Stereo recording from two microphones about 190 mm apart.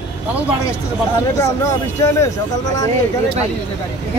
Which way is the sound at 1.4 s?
15° left (ahead or behind).